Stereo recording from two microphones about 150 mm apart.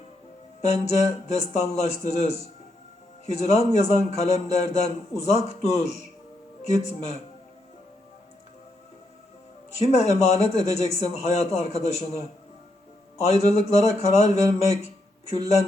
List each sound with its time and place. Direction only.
0.6 s speech: 45° left (ahead or behind)
9.7 s speech: 45° left (ahead or behind)
13.2 s speech: 45° left (ahead or behind)